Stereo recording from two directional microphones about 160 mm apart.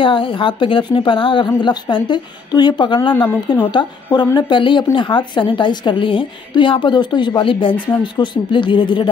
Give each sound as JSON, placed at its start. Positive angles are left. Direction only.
{"t": 0.0, "sound": "a woman's voice", "side_deg": 30}